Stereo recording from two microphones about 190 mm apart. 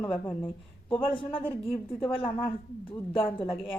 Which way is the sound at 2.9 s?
25° left (ahead or behind).